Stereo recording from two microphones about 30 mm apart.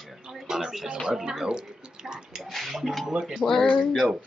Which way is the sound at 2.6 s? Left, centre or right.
Centre.